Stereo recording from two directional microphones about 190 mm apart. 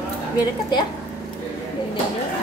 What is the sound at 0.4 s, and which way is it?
Speech, 20° left (ahead or behind).